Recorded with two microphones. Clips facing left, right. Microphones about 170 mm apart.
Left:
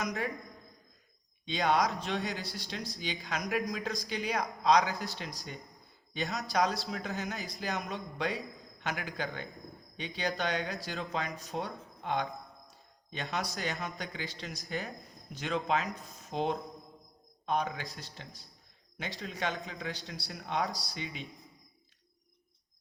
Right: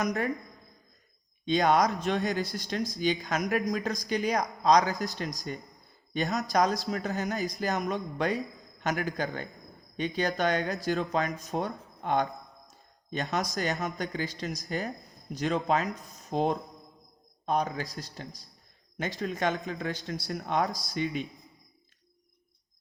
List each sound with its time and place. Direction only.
0.0 s speech: 40° right (ahead or behind)
1.5 s speech: 45° right (ahead or behind)